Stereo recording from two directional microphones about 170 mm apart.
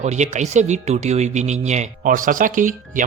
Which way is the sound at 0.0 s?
40° right (ahead or behind).